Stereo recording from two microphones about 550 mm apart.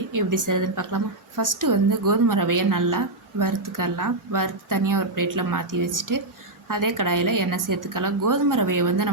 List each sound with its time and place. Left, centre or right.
0.1 s a woman's voice: right